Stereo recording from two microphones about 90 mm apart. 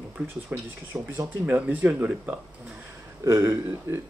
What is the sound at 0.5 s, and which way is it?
Speech, 15° right (ahead or behind).